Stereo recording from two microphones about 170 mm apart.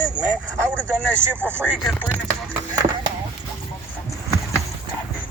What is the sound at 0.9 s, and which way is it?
Speech, 10° right (ahead or behind).